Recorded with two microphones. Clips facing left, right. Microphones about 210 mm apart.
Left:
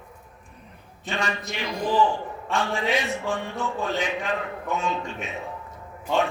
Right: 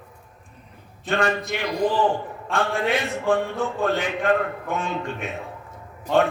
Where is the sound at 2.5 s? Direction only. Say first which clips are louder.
Right 2 dB; 55° right (ahead or behind).